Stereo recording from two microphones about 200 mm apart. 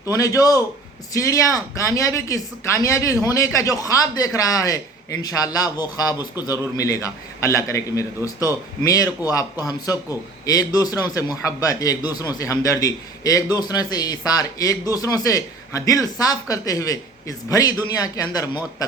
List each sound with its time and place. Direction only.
0.1 s a man's voice: 15° left (ahead or behind)